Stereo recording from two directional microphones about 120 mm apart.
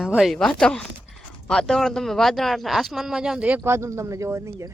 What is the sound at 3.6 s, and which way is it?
Speech, 25° right (ahead or behind).